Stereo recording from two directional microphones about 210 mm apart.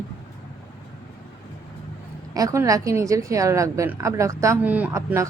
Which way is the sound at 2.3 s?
15° right (ahead or behind).